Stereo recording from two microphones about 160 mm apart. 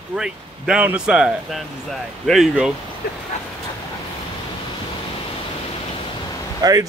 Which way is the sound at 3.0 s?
80° left.